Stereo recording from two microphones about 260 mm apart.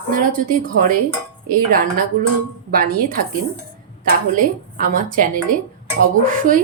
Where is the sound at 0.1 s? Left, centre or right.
Right.